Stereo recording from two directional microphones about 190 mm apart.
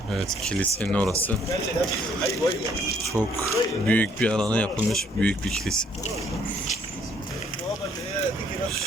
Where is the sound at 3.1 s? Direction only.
15° right (ahead or behind).